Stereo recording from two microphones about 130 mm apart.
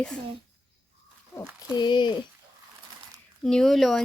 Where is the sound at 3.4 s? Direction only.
5° left (ahead or behind).